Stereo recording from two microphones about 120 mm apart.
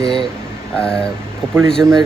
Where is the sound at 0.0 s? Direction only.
50° left (ahead or behind).